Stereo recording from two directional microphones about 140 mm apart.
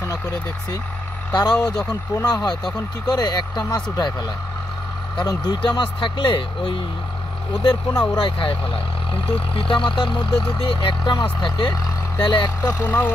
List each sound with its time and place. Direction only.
1.3 s speech: 30° left (ahead or behind)
5.2 s speech: 30° left (ahead or behind)
8.2 s speech: 35° left (ahead or behind)
12.6 s speech: 15° left (ahead or behind)